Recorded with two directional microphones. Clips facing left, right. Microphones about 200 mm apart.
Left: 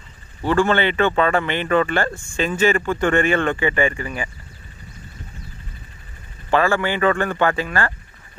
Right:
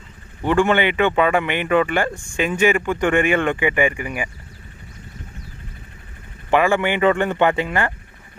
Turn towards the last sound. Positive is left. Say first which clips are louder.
# right 2 dB
turn(degrees=-20)  # may be behind; listen again after turning